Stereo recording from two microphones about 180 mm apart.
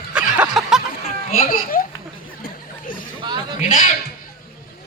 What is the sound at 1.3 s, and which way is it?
Speech, 50° left (ahead or behind).